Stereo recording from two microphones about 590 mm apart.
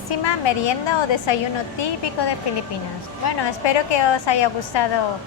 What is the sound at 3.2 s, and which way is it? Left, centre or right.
Speech, left.